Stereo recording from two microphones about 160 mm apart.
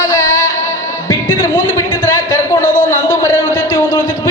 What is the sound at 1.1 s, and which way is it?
Music, 20° left (ahead or behind).